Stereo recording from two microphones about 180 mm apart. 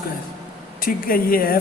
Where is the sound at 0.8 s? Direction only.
55° left (ahead or behind).